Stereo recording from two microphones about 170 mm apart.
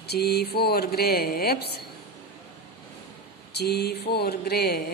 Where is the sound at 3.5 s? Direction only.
70° left (ahead or behind).